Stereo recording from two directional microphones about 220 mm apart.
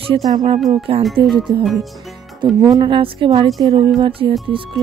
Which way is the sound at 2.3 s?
20° right (ahead or behind).